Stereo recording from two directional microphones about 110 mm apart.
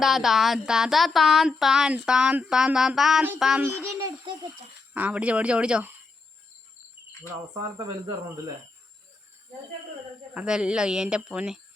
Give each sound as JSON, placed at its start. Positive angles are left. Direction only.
{"t": 0.0, "sound": "child singing", "side_deg": 0}
{"t": 3.6, "sound": "a child's voice", "side_deg": -25}
{"t": 4.9, "sound": "speech", "side_deg": -15}
{"t": 7.5, "sound": "speech", "side_deg": -40}
{"t": 10.3, "sound": "speech", "side_deg": -10}